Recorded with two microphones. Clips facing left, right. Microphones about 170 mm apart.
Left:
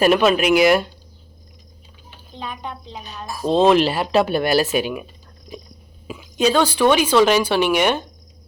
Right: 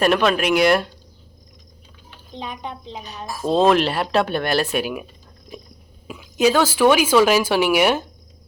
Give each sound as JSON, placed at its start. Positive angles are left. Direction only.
{"t": 0.0, "sound": "speech", "side_deg": 5}
{"t": 2.3, "sound": "a woman's voice", "side_deg": -20}
{"t": 3.4, "sound": "speech", "side_deg": 0}
{"t": 6.1, "sound": "a sound", "side_deg": 0}
{"t": 6.7, "sound": "speech", "side_deg": -10}